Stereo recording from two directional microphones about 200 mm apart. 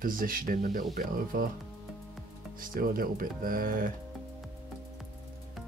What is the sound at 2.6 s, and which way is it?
Speech, 45° right (ahead or behind).